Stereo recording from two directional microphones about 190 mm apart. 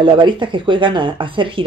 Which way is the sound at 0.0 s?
25° right (ahead or behind).